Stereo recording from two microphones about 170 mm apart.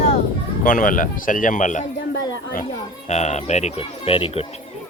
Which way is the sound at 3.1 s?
40° left (ahead or behind).